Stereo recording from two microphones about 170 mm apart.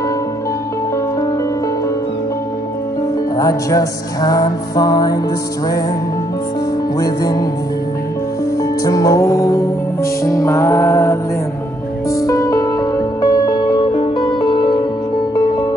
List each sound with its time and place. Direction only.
3.3 s music: 20° left (ahead or behind)
7.0 s music: 20° left (ahead or behind)
8.8 s music: 20° left (ahead or behind)